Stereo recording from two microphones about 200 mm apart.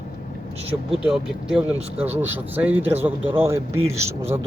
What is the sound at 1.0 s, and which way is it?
Speech, 5° right (ahead or behind).